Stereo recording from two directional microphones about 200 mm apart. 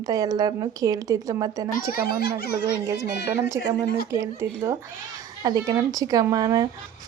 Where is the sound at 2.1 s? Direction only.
50° left (ahead or behind).